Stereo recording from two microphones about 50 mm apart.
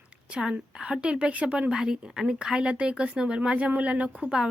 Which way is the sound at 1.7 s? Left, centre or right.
Centre.